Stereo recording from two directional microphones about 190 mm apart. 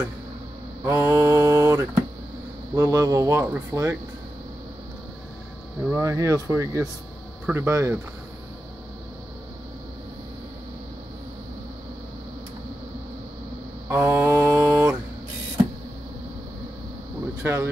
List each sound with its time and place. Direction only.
0.8 s speech: 15° right (ahead or behind)
5.9 s speech: 15° right (ahead or behind)
13.8 s mantra: 10° right (ahead or behind)
17.4 s speech: 15° right (ahead or behind)